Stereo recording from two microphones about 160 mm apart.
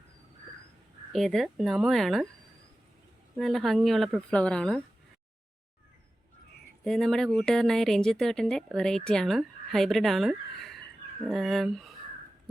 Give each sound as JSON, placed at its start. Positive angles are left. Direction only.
{"t": 1.1, "sound": "a woman's voice", "side_deg": 0}
{"t": 3.3, "sound": "a woman's voice", "side_deg": 0}
{"t": 6.8, "sound": "a woman's voice", "side_deg": 5}